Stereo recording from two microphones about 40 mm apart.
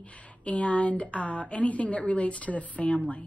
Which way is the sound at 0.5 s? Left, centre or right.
Left.